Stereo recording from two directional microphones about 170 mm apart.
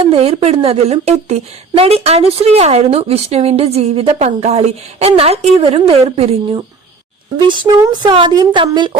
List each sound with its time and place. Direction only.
0.0 s a woman's voice: 35° right (ahead or behind)